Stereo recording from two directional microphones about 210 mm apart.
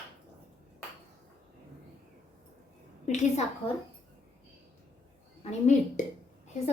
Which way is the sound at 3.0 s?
35° left (ahead or behind).